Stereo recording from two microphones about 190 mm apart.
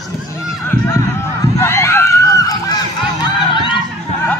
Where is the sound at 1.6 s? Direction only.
15° left (ahead or behind).